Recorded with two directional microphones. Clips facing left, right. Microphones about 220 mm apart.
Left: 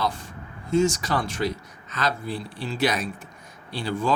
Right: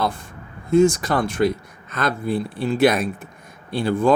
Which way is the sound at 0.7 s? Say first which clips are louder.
Right 6 dB; 55° right (ahead or behind).